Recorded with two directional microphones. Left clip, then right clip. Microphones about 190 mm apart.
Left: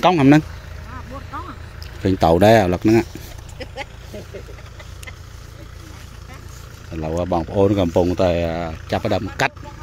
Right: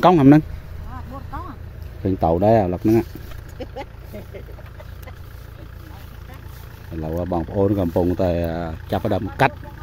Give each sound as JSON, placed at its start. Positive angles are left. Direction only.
{"t": 0.0, "sound": "speech", "side_deg": -30}
{"t": 2.0, "sound": "speech", "side_deg": 0}
{"t": 3.5, "sound": "vehicle", "side_deg": -55}
{"t": 6.9, "sound": "speech", "side_deg": 0}